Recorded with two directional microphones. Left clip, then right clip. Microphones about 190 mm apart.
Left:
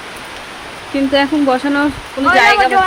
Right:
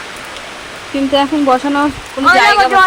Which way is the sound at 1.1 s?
10° left (ahead or behind).